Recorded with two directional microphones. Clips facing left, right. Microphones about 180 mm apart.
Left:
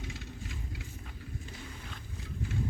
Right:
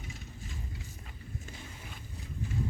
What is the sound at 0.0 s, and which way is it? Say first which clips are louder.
Vehicle: left 3 dB; 90° left.